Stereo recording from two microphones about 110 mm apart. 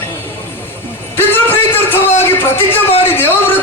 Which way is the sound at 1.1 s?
20° left (ahead or behind).